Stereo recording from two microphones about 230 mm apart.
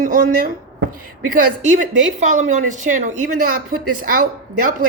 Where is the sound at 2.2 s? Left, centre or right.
Right.